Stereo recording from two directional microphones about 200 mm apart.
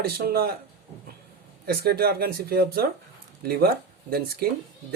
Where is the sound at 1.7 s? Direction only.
50° right (ahead or behind).